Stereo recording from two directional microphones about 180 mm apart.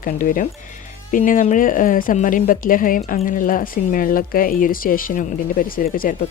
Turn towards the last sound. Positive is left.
turn(degrees=55)  # may be behind; listen again after turning